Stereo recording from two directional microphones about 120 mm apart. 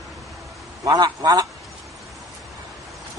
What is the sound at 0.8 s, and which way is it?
Speech, 35° right (ahead or behind).